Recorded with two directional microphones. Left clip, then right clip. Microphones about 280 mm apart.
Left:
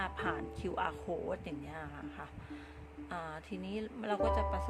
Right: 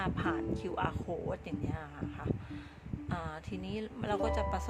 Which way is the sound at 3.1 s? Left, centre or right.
Centre.